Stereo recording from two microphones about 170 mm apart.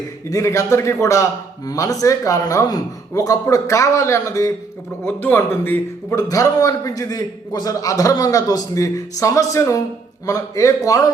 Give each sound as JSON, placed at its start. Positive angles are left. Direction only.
{"t": 0.3, "sound": "a man's voice", "side_deg": 20}